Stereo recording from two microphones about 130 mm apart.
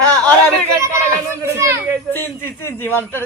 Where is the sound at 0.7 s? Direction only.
20° right (ahead or behind).